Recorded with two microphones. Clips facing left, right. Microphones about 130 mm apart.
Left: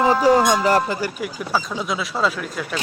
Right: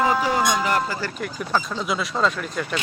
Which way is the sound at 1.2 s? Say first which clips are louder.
Left 1 dB; 5° left (ahead or behind).